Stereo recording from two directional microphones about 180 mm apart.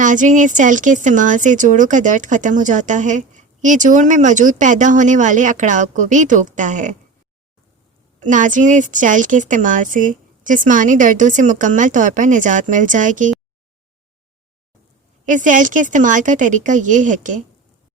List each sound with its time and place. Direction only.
0.0 s speech: 45° right (ahead or behind)
8.2 s speech: 45° right (ahead or behind)
15.3 s speech: 45° right (ahead or behind)